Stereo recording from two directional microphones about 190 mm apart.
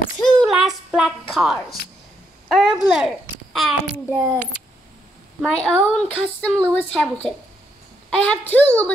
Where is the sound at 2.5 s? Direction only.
Centre (ahead or behind).